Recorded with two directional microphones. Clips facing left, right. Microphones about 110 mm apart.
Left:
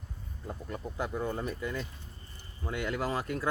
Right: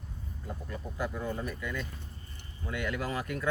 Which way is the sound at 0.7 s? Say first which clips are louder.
Left 1 dB; 30° left (ahead or behind).